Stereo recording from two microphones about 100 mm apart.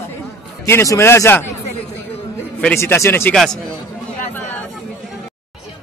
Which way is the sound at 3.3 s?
5° left (ahead or behind).